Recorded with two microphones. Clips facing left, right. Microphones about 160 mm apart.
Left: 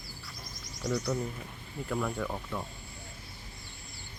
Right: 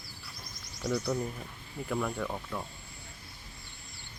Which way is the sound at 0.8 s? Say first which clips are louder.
Even; 5° right (ahead or behind).